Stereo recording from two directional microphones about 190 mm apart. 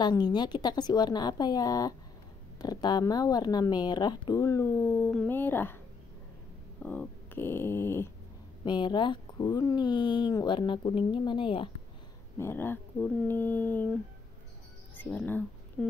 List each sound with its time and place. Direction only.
0.0 s speech: 20° left (ahead or behind)
6.8 s speech: 5° left (ahead or behind)
8.6 s speech: 25° left (ahead or behind)
12.4 s speech: 10° left (ahead or behind)
15.0 s speech: 5° left (ahead or behind)